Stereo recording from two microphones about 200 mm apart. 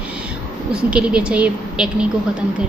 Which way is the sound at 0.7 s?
5° right (ahead or behind).